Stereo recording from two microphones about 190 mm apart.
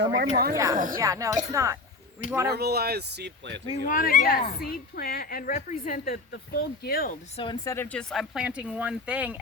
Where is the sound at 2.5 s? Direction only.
60° right (ahead or behind).